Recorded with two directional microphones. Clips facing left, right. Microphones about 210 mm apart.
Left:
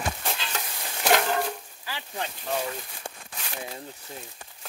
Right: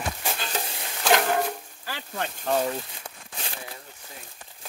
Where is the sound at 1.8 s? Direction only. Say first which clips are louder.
Right 2 dB; 55° right (ahead or behind).